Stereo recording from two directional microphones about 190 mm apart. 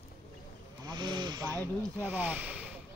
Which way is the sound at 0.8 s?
25° right (ahead or behind).